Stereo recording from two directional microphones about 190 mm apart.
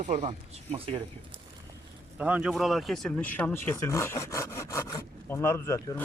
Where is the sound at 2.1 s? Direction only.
5° right (ahead or behind).